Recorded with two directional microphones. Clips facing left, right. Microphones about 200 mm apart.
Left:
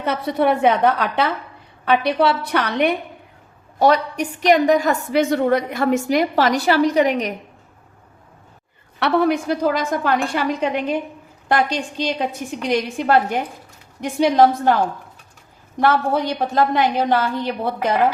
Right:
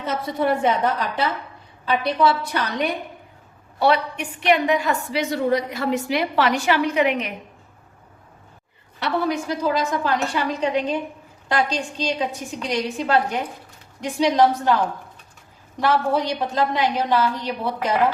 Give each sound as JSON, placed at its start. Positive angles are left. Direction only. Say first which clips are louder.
{"t": 0.0, "sound": "a woman's voice", "louder": "left 4 dB", "side_deg": 65}
{"t": 3.8, "sound": "a woman's voice", "louder": "left 3 dB", "side_deg": 40}
{"t": 9.0, "sound": "a woman's voice", "louder": "left 5 dB", "side_deg": 65}
{"t": 15.8, "sound": "a woman's voice", "louder": "left 2 dB", "side_deg": 55}